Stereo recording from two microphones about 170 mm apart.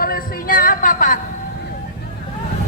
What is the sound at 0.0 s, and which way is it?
A woman's voice, 55° left (ahead or behind).